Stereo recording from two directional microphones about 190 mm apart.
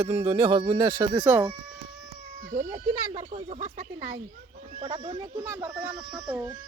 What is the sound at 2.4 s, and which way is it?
Speech, 45° right (ahead or behind).